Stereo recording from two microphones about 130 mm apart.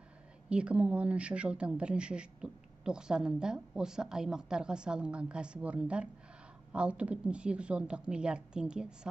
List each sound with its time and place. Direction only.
0.5 s speech: 10° right (ahead or behind)